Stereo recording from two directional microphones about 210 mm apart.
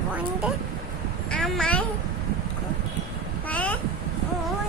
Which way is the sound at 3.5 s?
5° left (ahead or behind).